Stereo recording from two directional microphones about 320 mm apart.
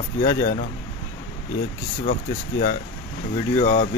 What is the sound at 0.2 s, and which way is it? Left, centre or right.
Speech, left.